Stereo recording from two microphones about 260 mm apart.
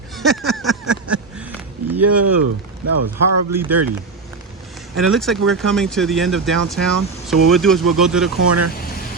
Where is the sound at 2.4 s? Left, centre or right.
Right.